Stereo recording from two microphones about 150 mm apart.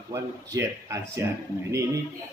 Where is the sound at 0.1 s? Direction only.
20° right (ahead or behind).